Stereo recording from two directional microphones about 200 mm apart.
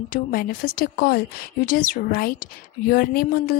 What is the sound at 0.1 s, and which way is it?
A woman's voice, 45° left (ahead or behind).